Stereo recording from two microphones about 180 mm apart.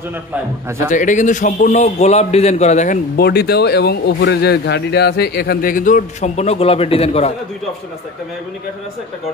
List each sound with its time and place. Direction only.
0.7 s a man's voice: 15° right (ahead or behind)
0.9 s a man's voice: 45° left (ahead or behind)
3.2 s speech: 60° left (ahead or behind); by 7.3 s 35° left (ahead or behind)